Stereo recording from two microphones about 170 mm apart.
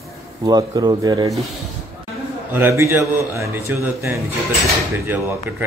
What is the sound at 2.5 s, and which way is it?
A man's voice, 15° right (ahead or behind).